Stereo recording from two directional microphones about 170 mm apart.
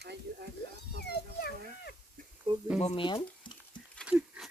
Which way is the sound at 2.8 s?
40° left (ahead or behind).